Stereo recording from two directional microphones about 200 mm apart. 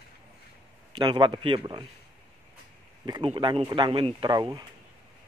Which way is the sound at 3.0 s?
20° right (ahead or behind).